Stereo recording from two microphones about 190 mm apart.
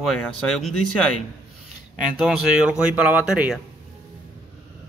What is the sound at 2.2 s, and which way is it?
Speech, 5° right (ahead or behind).